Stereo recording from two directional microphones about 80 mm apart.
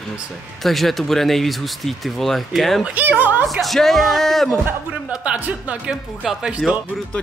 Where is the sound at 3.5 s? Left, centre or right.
Centre.